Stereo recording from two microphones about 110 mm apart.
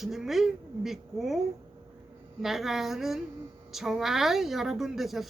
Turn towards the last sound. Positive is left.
turn(degrees=0)  # may be behind; listen again after turning